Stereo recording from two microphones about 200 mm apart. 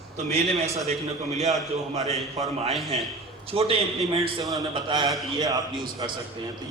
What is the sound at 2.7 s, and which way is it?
Speech, centre (ahead or behind).